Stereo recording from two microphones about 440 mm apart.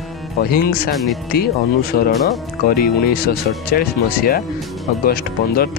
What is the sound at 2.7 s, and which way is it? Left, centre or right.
Speech, centre.